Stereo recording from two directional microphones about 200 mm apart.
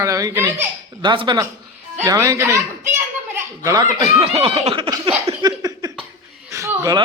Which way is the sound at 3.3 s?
15° right (ahead or behind).